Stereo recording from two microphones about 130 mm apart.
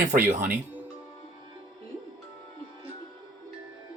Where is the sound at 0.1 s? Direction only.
85° right.